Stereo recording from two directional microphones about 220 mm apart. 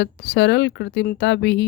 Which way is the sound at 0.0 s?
50° left (ahead or behind).